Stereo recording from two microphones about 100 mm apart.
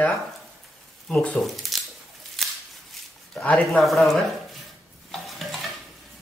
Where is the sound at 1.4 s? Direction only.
Centre (ahead or behind).